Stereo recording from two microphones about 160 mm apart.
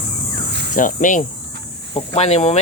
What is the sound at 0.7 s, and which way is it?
Speech, 55° left (ahead or behind).